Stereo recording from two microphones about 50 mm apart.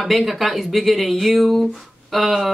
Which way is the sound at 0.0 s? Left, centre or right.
Centre.